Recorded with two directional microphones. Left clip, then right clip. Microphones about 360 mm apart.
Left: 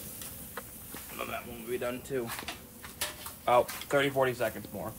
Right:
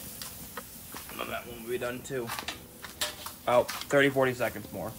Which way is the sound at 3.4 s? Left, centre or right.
Right.